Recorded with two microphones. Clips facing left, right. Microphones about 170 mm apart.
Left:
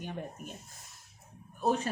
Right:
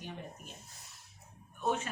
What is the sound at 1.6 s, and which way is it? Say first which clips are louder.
Speech: left 4 dB; 35° left (ahead or behind).